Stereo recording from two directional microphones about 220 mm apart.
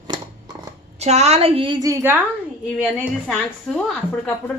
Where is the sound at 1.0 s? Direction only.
30° right (ahead or behind); by 2.2 s 10° right (ahead or behind).